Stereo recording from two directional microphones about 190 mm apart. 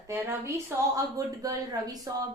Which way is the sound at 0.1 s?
15° right (ahead or behind).